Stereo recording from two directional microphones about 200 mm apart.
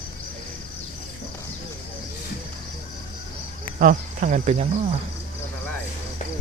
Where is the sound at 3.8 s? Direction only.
40° right (ahead or behind).